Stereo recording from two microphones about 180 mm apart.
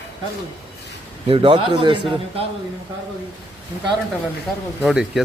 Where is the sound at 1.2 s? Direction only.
30° right (ahead or behind).